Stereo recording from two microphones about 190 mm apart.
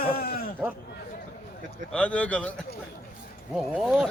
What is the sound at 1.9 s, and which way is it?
A man's voice, 5° left (ahead or behind).